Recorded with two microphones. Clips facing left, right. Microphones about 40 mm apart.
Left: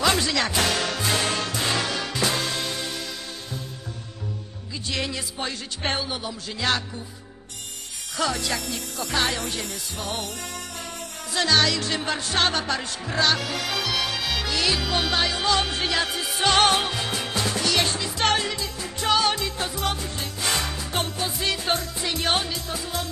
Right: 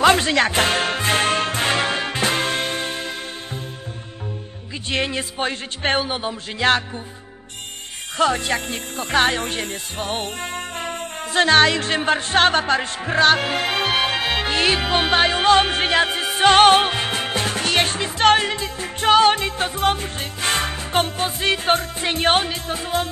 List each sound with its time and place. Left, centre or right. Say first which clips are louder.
0.0 s music: right 7 dB; right
4.9 s speech: right 7 dB; right
8.2 s speech: right 6 dB; right